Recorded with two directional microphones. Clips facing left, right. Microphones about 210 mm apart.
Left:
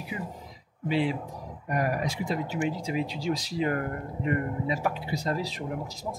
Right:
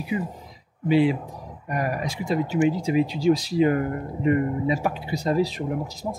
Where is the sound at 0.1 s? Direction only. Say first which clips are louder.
Right 11 dB; 15° right (ahead or behind).